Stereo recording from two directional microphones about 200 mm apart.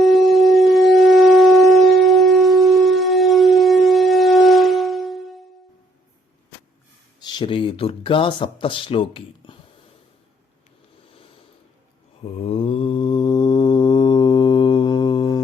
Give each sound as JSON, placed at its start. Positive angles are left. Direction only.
{"t": 0.0, "sound": "wind instrument", "side_deg": 0}
{"t": 7.2, "sound": "speech", "side_deg": 25}
{"t": 12.2, "sound": "mantra", "side_deg": 30}